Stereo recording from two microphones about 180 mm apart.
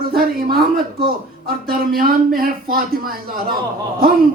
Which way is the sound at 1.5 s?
55° right (ahead or behind).